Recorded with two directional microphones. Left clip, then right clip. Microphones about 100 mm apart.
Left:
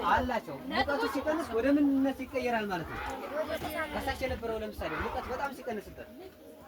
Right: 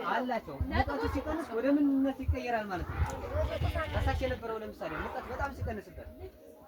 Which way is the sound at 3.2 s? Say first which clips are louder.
Even; centre (ahead or behind).